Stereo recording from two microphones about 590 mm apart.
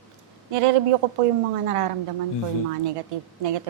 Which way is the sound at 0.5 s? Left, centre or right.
Right.